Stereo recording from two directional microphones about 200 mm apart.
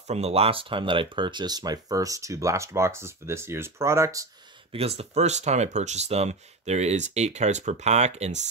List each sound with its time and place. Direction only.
0.1 s speech: 30° right (ahead or behind); by 4.3 s 15° right (ahead or behind)
4.7 s speech: 30° right (ahead or behind)